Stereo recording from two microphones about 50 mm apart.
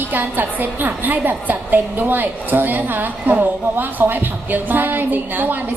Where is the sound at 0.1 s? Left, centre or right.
Right.